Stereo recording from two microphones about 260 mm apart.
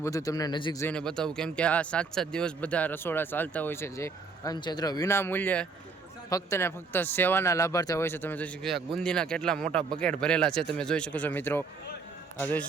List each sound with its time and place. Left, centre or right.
0.0 s speech: centre